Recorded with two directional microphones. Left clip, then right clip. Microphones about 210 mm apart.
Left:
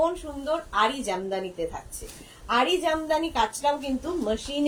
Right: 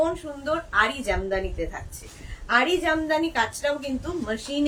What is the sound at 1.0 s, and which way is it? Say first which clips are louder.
A woman's voice: right 3 dB; 15° right (ahead or behind).